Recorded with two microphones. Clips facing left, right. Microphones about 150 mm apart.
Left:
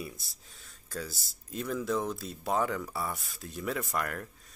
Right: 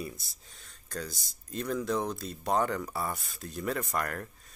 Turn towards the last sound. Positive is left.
turn(degrees=0)  # may be behind; listen again after turning